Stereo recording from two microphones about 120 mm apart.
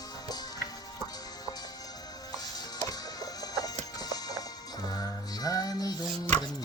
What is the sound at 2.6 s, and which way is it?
Music, 30° left (ahead or behind).